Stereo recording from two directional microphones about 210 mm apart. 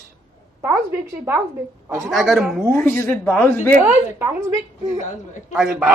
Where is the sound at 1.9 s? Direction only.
Centre (ahead or behind).